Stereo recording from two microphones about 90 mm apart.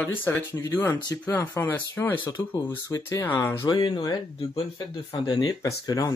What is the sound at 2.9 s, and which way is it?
Speech, 35° left (ahead or behind).